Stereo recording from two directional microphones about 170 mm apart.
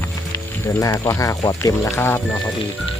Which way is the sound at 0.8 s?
15° left (ahead or behind).